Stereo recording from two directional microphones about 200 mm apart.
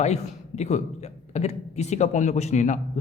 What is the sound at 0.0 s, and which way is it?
Speech, 35° left (ahead or behind).